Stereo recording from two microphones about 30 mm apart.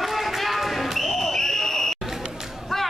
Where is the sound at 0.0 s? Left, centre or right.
Centre.